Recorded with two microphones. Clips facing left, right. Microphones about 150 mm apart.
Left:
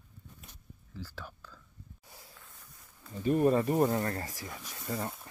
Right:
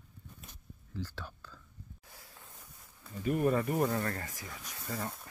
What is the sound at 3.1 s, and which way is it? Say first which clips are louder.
Speech: left 4 dB; 25° left (ahead or behind).